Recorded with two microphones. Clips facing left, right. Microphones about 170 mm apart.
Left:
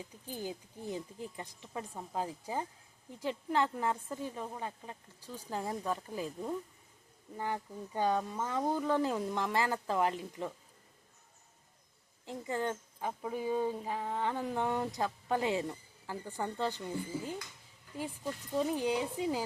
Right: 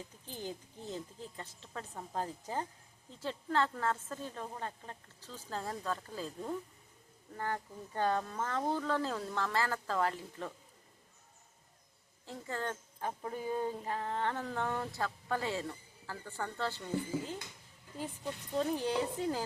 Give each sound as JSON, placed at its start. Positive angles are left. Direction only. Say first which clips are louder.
{"t": 0.3, "sound": "speech", "louder": "left 3 dB", "side_deg": 10}
{"t": 12.2, "sound": "speech", "louder": "left 4 dB", "side_deg": 15}
{"t": 18.5, "sound": "speech", "louder": "left 1 dB", "side_deg": 10}